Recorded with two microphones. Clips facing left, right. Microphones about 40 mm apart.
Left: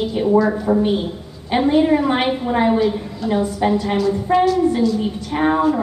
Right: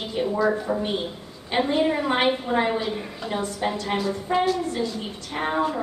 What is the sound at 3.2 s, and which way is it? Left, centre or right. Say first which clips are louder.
Speech: left 9 dB; centre.